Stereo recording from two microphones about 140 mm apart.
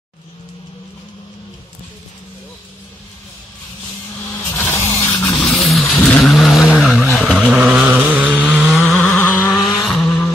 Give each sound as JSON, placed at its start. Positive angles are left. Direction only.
{"t": 4.6, "sound": "a sound", "side_deg": 15}
{"t": 5.5, "sound": "vehicle", "side_deg": 0}
{"t": 8.7, "sound": "vehicle", "side_deg": 5}
{"t": 9.2, "sound": "vehicle", "side_deg": 15}